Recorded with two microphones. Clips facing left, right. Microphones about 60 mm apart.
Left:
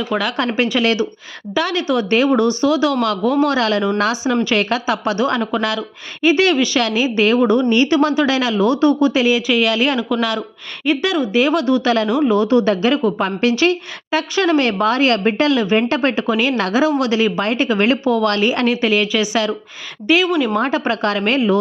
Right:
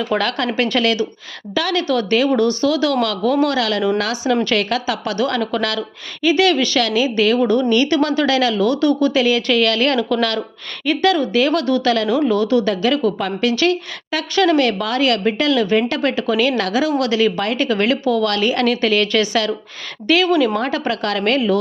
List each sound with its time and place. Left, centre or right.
0.3 s a woman's voice: left